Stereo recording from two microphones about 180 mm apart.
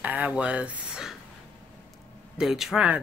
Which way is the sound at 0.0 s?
10° right (ahead or behind).